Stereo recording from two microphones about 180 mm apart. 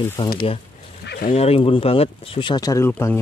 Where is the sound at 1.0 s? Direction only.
55° left (ahead or behind).